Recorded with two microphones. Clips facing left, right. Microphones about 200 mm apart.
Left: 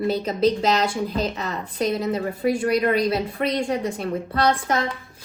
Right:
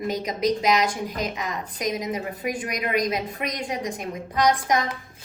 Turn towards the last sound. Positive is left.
turn(degrees=-15)  # may be behind; listen again after turning